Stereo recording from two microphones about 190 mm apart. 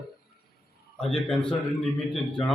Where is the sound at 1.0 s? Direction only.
5° left (ahead or behind).